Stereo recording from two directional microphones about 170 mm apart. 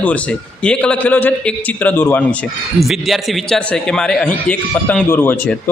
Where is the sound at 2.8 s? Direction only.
Centre (ahead or behind).